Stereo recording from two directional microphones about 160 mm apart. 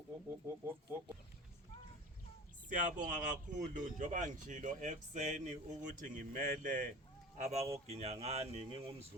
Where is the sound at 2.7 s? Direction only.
50° right (ahead or behind).